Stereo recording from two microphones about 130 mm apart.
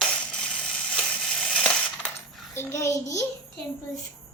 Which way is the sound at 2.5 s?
20° left (ahead or behind).